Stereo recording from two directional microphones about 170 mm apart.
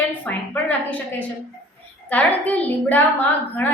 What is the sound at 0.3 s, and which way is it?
Speech, 10° left (ahead or behind).